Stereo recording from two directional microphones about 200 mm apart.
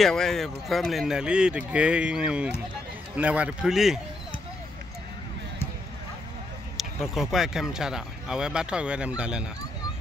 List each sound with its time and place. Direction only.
0.0 s speech: centre (ahead or behind)
6.8 s speech: centre (ahead or behind)